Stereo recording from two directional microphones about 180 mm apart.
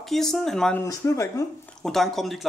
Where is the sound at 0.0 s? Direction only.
Centre (ahead or behind).